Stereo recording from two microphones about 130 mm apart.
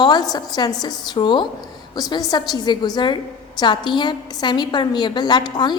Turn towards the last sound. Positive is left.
turn(degrees=35)  # may be behind; listen again after turning